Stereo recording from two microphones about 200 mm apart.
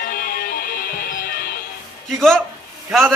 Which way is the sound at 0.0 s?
45° left (ahead or behind).